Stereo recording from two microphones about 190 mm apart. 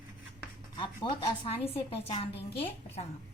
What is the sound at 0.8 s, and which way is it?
A woman's voice, 25° left (ahead or behind).